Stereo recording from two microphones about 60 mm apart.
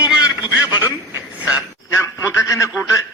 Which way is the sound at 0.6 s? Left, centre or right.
Right.